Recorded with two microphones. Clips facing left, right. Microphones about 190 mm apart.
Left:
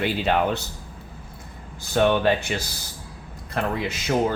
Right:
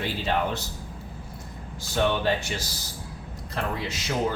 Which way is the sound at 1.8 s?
60° left (ahead or behind).